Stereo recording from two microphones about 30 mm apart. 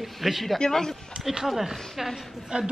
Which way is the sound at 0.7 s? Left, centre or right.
Centre.